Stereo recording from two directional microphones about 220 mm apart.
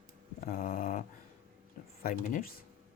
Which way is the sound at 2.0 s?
40° left (ahead or behind).